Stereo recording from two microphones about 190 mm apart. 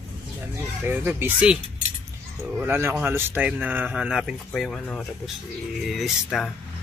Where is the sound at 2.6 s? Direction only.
10° right (ahead or behind).